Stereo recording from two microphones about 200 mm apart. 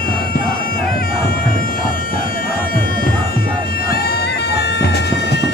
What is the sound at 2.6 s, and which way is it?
Music, 45° left (ahead or behind).